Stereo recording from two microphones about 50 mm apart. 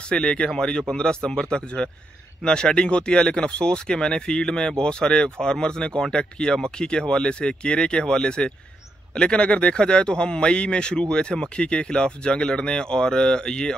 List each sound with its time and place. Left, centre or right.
0.0 s speech: centre